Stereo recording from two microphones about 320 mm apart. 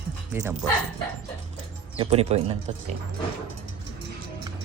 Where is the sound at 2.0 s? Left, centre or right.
Centre.